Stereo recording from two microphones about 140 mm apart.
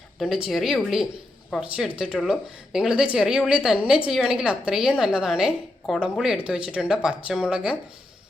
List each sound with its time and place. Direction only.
0.2 s a woman's voice: 5° right (ahead or behind)